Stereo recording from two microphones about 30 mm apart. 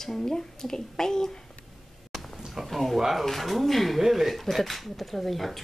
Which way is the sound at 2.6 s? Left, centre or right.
Centre.